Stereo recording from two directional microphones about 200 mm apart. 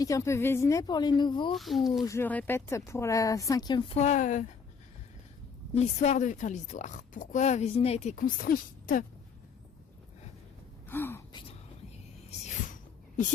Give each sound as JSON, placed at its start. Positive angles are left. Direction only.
{"t": 0.0, "sound": "speech", "side_deg": 15}
{"t": 1.5, "sound": "speech", "side_deg": 0}
{"t": 2.0, "sound": "speech", "side_deg": 10}
{"t": 5.7, "sound": "speech", "side_deg": 35}
{"t": 10.8, "sound": "speech", "side_deg": 10}
{"t": 12.5, "sound": "a sound", "side_deg": 40}